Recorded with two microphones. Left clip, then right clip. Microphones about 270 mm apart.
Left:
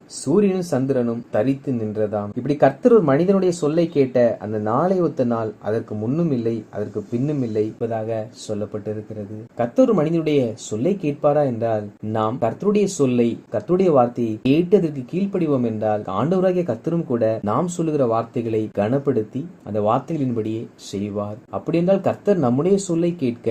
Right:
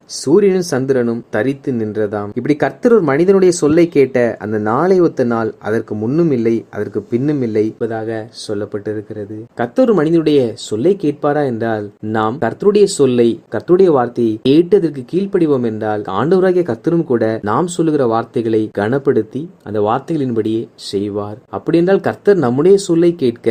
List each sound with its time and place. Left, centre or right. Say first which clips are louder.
0.3 s speech: right 7 dB; right
9.6 s speech: right 4 dB; right
21.7 s speech: right 6 dB; right